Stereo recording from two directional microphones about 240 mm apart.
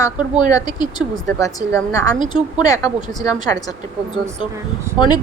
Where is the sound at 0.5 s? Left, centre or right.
Centre.